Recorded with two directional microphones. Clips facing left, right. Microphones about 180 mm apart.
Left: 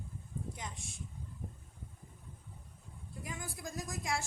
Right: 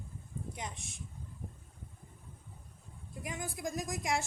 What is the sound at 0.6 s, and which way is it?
Speech, 20° right (ahead or behind).